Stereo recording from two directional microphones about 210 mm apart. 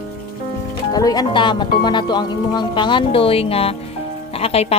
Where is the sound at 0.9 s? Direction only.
20° left (ahead or behind).